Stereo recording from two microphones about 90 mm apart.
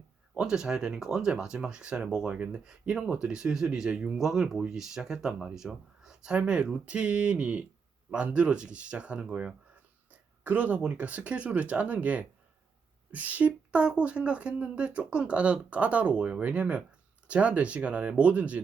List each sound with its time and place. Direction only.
0.3 s speech: 5° right (ahead or behind)